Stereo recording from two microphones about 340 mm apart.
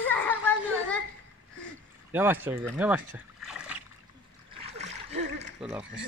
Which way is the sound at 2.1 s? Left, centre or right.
Centre.